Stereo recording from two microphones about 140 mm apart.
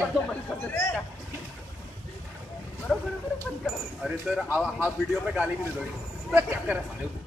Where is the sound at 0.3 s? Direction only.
15° left (ahead or behind).